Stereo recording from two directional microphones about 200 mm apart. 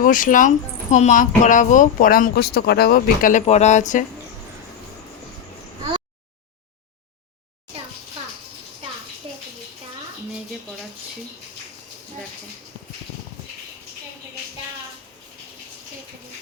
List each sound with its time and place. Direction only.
0.0 s speech: 40° left (ahead or behind)